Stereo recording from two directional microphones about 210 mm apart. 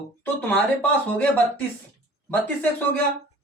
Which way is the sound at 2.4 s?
10° left (ahead or behind).